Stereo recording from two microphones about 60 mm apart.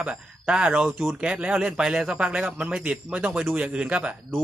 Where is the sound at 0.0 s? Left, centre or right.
Centre.